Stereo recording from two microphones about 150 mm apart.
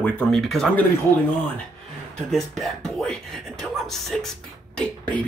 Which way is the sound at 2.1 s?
5° left (ahead or behind).